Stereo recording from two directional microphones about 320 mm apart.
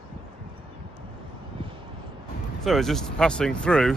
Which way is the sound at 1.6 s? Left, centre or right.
Centre.